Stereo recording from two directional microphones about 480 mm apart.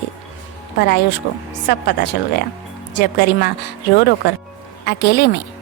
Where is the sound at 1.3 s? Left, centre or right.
Left.